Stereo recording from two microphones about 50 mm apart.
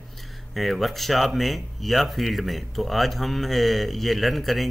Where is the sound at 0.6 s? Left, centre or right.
Centre.